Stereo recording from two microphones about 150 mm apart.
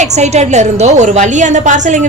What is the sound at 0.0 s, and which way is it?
A woman's voice, 50° right (ahead or behind).